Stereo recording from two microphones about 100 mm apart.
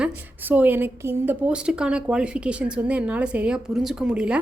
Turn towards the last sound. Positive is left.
turn(degrees=-10)  # may be behind; listen again after turning